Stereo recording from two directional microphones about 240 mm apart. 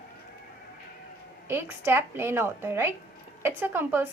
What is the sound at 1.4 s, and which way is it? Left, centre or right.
A woman's voice, centre.